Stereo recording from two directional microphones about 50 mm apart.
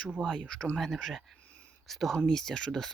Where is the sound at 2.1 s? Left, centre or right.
Centre.